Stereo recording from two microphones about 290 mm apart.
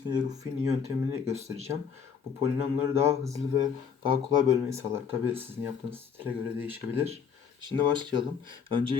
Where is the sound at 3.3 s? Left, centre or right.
Centre.